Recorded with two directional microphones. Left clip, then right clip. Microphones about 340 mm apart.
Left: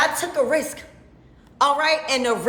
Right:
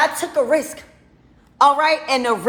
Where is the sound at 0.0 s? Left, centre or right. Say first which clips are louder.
Right 2 dB; centre.